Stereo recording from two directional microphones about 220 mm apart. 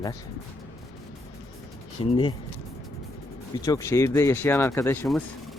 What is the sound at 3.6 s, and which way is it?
Speech, 15° left (ahead or behind).